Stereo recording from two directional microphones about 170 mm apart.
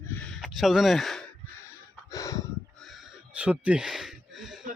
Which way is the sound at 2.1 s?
20° left (ahead or behind).